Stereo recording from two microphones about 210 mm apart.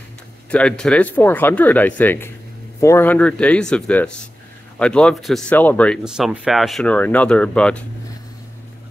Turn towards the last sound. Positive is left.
turn(degrees=5)  # may be behind; listen again after turning